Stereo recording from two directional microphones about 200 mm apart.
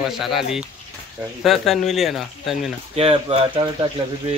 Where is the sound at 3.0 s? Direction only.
30° right (ahead or behind).